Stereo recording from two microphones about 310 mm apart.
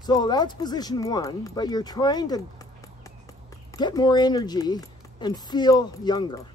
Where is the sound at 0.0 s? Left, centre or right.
Centre.